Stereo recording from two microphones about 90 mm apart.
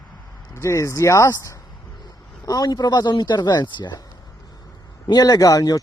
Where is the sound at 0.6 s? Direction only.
35° left (ahead or behind); by 4.0 s 60° left (ahead or behind).